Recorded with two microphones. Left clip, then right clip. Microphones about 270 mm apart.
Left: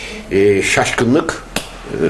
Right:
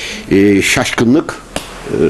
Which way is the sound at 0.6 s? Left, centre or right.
Right.